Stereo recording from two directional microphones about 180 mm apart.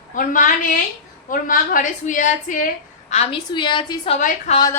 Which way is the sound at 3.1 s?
35° left (ahead or behind).